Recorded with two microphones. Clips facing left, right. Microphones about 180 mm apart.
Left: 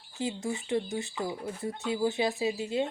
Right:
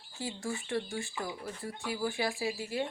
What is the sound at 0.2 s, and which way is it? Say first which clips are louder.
Speech: left 5 dB; 20° left (ahead or behind).